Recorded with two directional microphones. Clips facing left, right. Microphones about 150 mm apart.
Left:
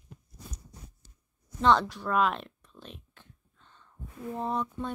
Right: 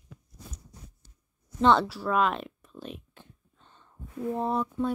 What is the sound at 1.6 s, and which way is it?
Speech, 5° right (ahead or behind).